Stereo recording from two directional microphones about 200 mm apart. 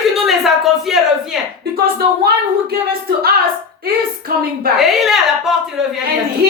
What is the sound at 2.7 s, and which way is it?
Speech, 50° right (ahead or behind).